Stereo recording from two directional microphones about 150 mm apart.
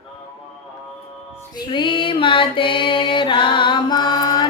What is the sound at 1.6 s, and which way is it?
Music, 35° left (ahead or behind).